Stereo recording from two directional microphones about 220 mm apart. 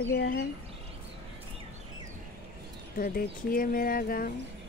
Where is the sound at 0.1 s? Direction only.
45° left (ahead or behind).